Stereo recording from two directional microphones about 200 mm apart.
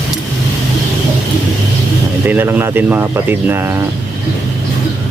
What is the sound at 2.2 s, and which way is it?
Speech, 10° right (ahead or behind).